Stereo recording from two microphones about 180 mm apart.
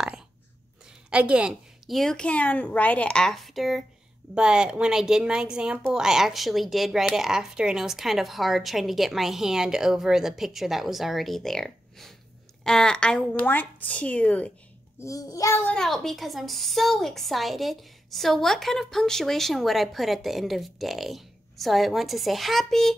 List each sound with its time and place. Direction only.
1.1 s a woman's voice: 5° right (ahead or behind)
15.0 s a woman's voice: 20° left (ahead or behind)
15.7 s a woman's voice: centre (ahead or behind)